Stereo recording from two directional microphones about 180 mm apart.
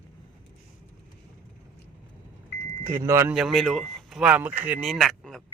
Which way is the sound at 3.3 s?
Centre (ahead or behind).